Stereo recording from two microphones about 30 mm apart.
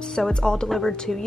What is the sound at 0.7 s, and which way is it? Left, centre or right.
Speech, centre.